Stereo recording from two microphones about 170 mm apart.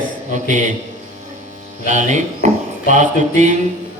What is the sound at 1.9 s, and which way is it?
Speech, 45° right (ahead or behind).